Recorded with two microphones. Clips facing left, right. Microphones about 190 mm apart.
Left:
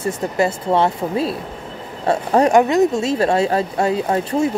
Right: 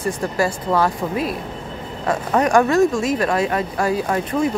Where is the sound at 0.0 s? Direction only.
25° left (ahead or behind).